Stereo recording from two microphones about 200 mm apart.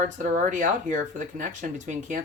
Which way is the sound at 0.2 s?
40° right (ahead or behind).